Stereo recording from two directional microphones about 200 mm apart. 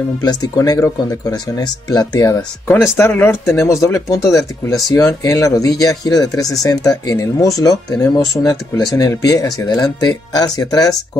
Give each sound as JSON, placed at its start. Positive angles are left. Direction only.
{"t": 0.2, "sound": "speech", "side_deg": 20}